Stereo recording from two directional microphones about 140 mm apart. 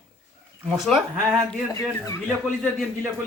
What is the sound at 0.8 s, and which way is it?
Speech, centre (ahead or behind).